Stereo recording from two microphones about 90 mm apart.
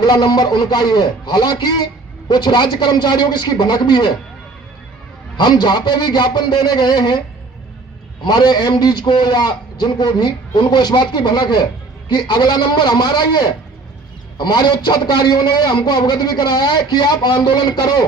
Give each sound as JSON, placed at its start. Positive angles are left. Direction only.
{"t": 0.0, "sound": "a man's voice", "side_deg": 50}
{"t": 5.4, "sound": "a man's voice", "side_deg": 55}
{"t": 8.2, "sound": "a man's voice", "side_deg": 50}